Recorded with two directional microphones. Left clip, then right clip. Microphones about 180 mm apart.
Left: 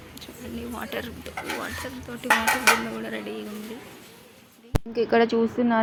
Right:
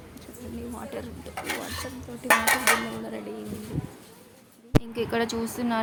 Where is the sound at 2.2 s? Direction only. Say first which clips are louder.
Left 1 dB; 20° right (ahead or behind).